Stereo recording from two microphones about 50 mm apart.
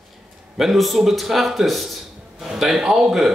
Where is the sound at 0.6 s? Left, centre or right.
Centre.